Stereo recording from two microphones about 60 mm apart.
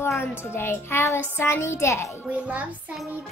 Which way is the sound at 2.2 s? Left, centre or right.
Right.